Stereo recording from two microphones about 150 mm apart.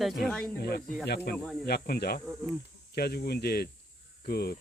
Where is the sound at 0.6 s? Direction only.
90° left.